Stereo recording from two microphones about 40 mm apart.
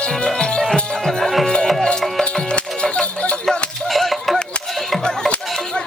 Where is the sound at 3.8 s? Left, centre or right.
Centre.